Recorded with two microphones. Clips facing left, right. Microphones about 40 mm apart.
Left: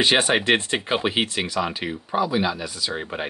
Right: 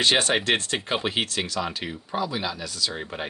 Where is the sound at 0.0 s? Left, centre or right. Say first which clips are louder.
Left 3 dB; centre.